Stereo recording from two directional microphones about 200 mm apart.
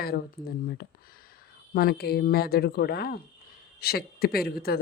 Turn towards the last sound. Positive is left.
turn(degrees=50)  # may be behind; listen again after turning